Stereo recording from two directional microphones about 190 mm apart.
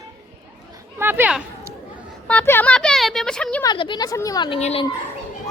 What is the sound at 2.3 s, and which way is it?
A woman's voice, 10° left (ahead or behind).